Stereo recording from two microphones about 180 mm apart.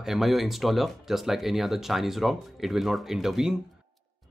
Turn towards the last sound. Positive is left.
turn(degrees=-5)  # may be behind; listen again after turning